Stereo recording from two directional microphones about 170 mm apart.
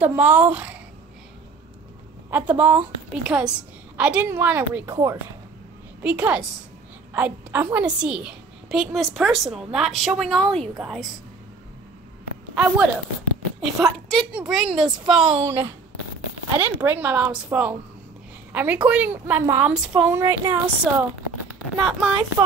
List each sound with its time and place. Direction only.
0.0 s a woman's voice: 10° right (ahead or behind)
2.3 s a woman's voice: 10° right (ahead or behind)
12.5 s a woman's voice: 5° right (ahead or behind)
19.4 s a woman's voice: 20° right (ahead or behind)
19.7 s a woman's voice: 5° right (ahead or behind)